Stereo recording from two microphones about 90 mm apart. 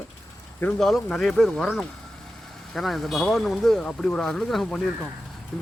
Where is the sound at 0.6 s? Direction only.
5° left (ahead or behind).